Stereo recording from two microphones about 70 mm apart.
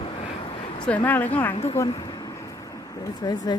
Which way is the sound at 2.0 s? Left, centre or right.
Left.